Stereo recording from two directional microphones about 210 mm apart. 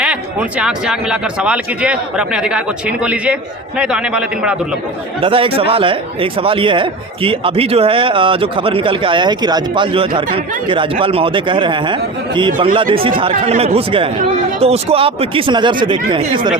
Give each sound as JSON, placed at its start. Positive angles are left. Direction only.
{"t": 0.0, "sound": "speech", "side_deg": -5}
{"t": 5.2, "sound": "speech", "side_deg": -25}